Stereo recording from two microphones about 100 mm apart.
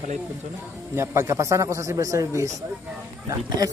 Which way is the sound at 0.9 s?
25° right (ahead or behind).